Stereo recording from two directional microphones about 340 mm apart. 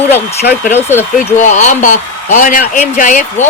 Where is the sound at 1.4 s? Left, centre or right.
Left.